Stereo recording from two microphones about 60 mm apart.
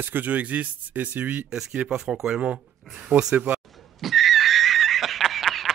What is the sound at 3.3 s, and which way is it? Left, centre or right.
Speech, right.